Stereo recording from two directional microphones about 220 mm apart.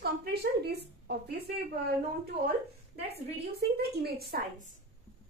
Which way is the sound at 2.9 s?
50° right (ahead or behind).